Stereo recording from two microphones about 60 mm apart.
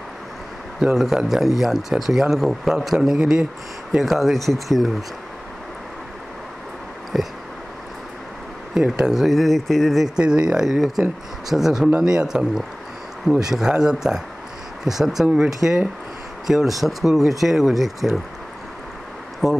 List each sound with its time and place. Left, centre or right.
0.7 s speech: centre
3.9 s speech: centre
7.1 s speech: centre
8.7 s speech: centre
10.1 s speech: centre
19.4 s speech: centre